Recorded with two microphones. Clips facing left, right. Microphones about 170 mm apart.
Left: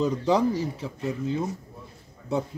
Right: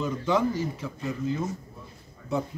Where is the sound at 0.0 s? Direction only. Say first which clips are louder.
Left 3 dB; 35° left (ahead or behind).